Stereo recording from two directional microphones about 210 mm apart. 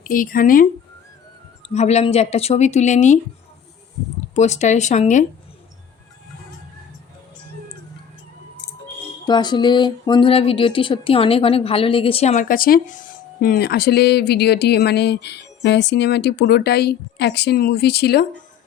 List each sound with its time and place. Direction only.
0.0 s speech: 40° left (ahead or behind)
4.4 s speech: 35° left (ahead or behind)
9.2 s speech: 20° left (ahead or behind); by 18.3 s 50° left (ahead or behind)